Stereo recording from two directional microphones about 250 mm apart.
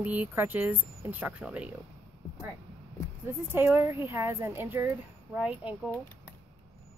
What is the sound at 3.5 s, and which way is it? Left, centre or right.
Speech, centre.